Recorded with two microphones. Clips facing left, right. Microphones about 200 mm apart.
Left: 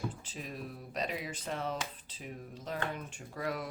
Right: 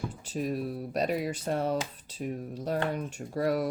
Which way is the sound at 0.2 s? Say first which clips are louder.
Right 11 dB; 45° right (ahead or behind).